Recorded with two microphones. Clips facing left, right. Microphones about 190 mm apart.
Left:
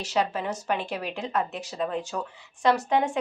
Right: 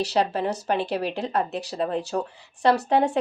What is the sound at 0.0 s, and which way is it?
Speech, 35° right (ahead or behind).